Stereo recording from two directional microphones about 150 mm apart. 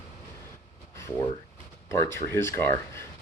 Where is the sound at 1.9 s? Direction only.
15° left (ahead or behind).